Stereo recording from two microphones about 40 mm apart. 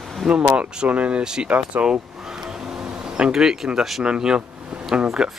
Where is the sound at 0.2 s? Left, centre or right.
Centre.